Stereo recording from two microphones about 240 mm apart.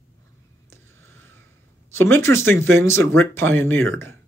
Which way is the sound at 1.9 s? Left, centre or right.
Centre.